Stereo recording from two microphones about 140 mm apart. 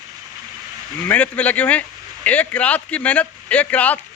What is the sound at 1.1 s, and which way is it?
Speech, 10° left (ahead or behind).